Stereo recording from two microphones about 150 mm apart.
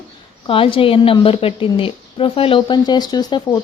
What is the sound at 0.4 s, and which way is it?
A woman's voice, 35° left (ahead or behind).